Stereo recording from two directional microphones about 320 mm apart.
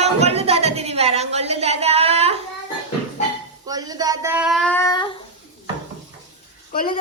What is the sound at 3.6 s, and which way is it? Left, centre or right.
Child singing, centre.